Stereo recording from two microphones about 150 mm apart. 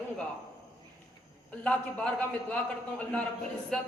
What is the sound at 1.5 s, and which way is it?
A man's voice, 10° left (ahead or behind).